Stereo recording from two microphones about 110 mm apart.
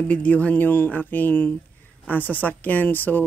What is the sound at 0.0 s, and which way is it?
Speech, 15° left (ahead or behind).